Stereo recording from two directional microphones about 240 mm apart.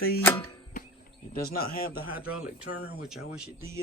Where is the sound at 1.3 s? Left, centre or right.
Left.